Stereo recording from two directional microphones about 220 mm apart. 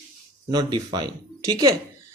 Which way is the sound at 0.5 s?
20° right (ahead or behind).